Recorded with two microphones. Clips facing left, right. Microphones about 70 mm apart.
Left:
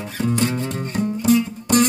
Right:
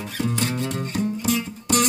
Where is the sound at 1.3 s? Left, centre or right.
Left.